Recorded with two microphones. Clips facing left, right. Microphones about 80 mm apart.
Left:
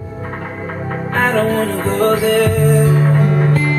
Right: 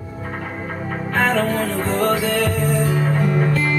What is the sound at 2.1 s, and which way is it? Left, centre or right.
Music, left.